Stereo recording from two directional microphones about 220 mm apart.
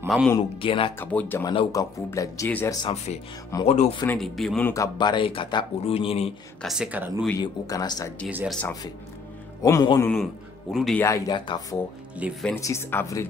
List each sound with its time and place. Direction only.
0.0 s speech: 5° right (ahead or behind)
0.4 s speech: 25° left (ahead or behind)
0.9 s speech: 10° left (ahead or behind)
1.4 s speech: 20° left (ahead or behind)
3.6 s speech: 30° left (ahead or behind)
4.2 s speech: centre (ahead or behind); by 6.3 s 25° left (ahead or behind)
6.6 s speech: centre (ahead or behind)
7.2 s speech: 15° left (ahead or behind)
8.3 s speech: 5° right (ahead or behind)
8.5 s speech: 10° left (ahead or behind)
10.7 s speech: centre (ahead or behind)
11.0 s speech: 15° left (ahead or behind)
12.2 s speech: centre (ahead or behind)
12.5 s speech: 15° left (ahead or behind)